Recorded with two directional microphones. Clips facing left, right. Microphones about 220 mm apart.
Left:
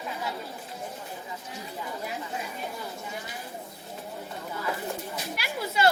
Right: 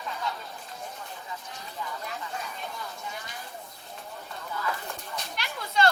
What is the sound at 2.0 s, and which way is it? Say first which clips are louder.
Chatter: left 2 dB; 10° left (ahead or behind).